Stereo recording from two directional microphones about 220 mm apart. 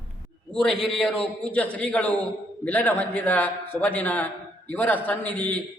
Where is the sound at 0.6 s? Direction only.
Centre (ahead or behind).